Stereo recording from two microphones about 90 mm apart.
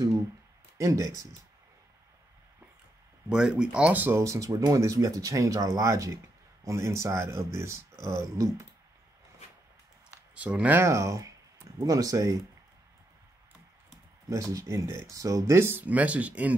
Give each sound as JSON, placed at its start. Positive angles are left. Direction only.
{"t": 0.7, "sound": "speech", "side_deg": -35}
{"t": 3.3, "sound": "speech", "side_deg": -10}
{"t": 4.2, "sound": "speech", "side_deg": -35}
{"t": 10.3, "sound": "speech", "side_deg": -15}
{"t": 10.8, "sound": "speech", "side_deg": -35}
{"t": 14.3, "sound": "speech", "side_deg": -35}